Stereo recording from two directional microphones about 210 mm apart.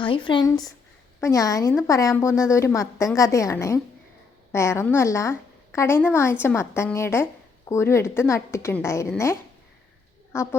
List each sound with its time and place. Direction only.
0.0 s a woman's voice: 25° left (ahead or behind)